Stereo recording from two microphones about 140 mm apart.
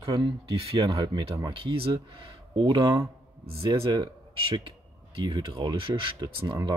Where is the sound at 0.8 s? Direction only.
35° right (ahead or behind).